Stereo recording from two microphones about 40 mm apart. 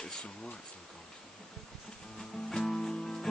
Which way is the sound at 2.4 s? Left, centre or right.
Centre.